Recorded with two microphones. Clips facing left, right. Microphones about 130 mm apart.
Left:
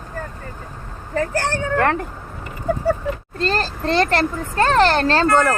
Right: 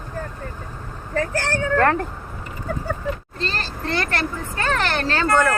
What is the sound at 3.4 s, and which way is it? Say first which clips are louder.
Speech: left 9 dB; 45° left (ahead or behind).